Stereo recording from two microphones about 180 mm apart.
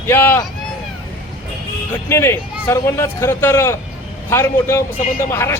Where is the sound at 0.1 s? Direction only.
15° left (ahead or behind).